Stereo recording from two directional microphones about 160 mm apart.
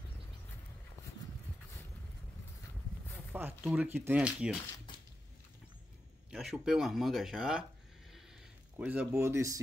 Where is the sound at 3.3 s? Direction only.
10° right (ahead or behind).